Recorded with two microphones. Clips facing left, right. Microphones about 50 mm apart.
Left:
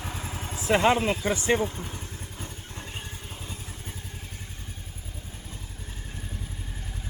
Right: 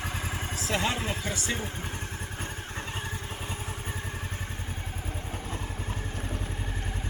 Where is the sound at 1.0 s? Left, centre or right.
Centre.